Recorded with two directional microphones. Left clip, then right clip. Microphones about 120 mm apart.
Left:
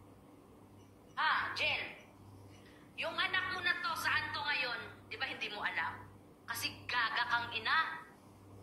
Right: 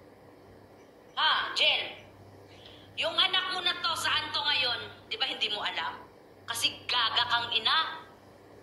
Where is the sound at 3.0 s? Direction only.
20° right (ahead or behind).